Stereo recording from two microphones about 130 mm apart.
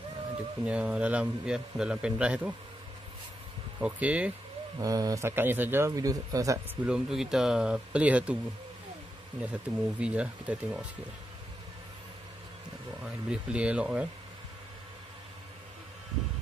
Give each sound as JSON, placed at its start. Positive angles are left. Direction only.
{"t": 0.7, "sound": "a man's voice", "side_deg": -10}
{"t": 3.8, "sound": "a man's voice", "side_deg": -10}
{"t": 4.7, "sound": "a man's voice", "side_deg": -30}
{"t": 6.7, "sound": "a man's voice", "side_deg": -5}
{"t": 9.4, "sound": "a man's voice", "side_deg": -10}
{"t": 13.0, "sound": "a man's voice", "side_deg": -5}